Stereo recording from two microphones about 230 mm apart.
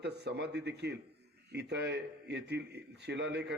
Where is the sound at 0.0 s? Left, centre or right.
Right.